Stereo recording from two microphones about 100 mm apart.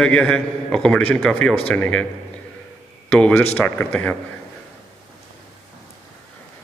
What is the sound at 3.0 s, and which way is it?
A man's voice, 10° left (ahead or behind).